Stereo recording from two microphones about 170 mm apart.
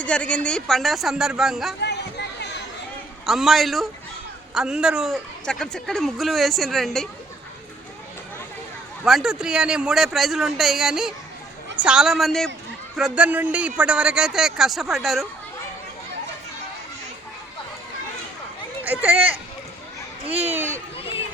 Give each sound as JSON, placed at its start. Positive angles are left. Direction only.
{"t": 0.0, "sound": "speech", "side_deg": 5}
{"t": 1.8, "sound": "a sound", "side_deg": 80}
{"t": 3.2, "sound": "speech", "side_deg": 0}
{"t": 9.0, "sound": "speech", "side_deg": -5}
{"t": 20.2, "sound": "speech", "side_deg": -35}
{"t": 20.5, "sound": "speech", "side_deg": -15}